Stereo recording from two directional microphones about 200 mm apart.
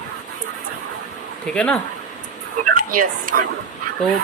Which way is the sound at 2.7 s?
45° right (ahead or behind).